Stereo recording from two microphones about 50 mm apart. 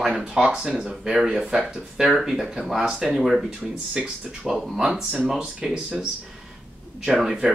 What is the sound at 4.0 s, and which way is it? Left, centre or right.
Speech, centre.